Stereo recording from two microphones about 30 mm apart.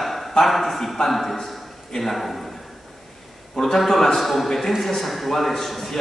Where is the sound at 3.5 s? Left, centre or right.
Centre.